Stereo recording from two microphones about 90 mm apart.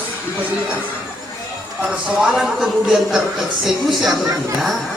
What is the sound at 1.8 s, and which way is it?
Speech, 5° right (ahead or behind).